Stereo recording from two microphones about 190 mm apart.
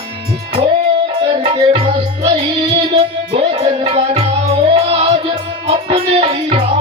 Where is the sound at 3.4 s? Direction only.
30° right (ahead or behind).